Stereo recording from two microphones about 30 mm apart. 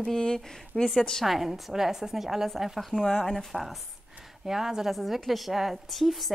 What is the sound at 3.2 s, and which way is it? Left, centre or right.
Speech, centre.